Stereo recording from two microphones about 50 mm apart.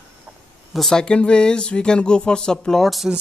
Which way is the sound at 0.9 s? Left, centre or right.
Centre.